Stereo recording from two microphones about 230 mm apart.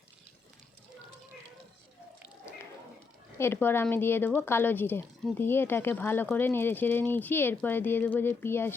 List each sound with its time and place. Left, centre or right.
3.3 s a woman's voice: centre